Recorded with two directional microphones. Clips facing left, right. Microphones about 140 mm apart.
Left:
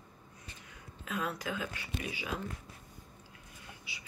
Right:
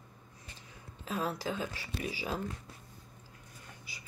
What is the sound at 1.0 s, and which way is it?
Speech, 35° right (ahead or behind).